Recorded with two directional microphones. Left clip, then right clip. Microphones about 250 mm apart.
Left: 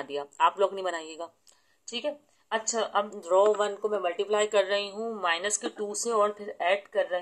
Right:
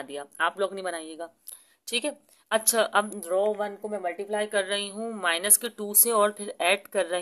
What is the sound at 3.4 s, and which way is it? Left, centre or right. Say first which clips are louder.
Speech: left 4 dB; centre.